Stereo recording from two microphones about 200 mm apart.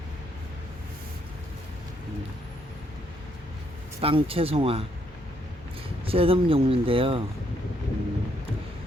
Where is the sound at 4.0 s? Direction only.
30° right (ahead or behind).